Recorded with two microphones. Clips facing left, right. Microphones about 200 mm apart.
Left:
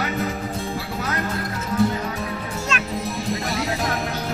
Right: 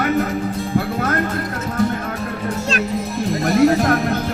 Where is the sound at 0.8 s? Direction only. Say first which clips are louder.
Right 8 dB; 55° right (ahead or behind).